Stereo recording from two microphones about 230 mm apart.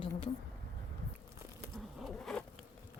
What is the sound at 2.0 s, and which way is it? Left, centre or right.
Insect, centre.